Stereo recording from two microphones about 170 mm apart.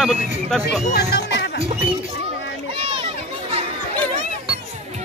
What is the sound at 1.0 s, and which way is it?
Music, 80° left.